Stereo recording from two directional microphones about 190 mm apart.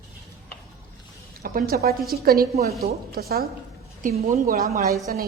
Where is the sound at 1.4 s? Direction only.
50° right (ahead or behind).